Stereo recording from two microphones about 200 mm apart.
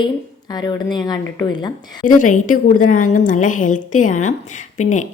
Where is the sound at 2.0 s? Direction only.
40° left (ahead or behind).